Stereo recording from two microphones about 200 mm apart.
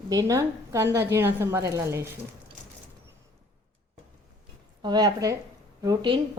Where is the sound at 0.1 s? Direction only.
15° right (ahead or behind).